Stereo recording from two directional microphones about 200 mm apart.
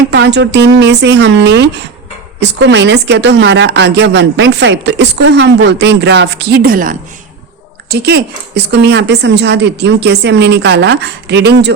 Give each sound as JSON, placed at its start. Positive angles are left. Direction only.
{"t": 0.1, "sound": "a woman's voice", "side_deg": -60}